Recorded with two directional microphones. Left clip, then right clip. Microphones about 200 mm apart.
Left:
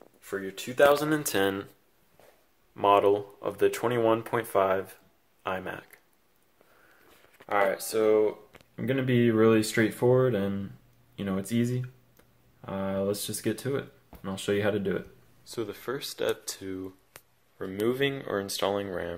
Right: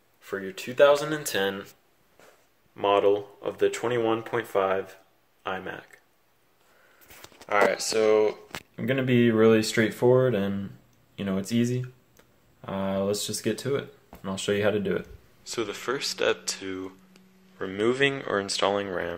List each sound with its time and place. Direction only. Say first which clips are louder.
0.2 s speech: right 1 dB; centre (ahead or behind)
1.0 s speech: left 1 dB; 40° left (ahead or behind)
2.7 s speech: even; 20° left (ahead or behind)
7.4 s speech: right 3 dB; 10° left (ahead or behind)